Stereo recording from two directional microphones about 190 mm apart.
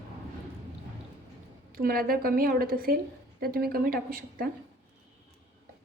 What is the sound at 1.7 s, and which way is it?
Speech, 50° right (ahead or behind).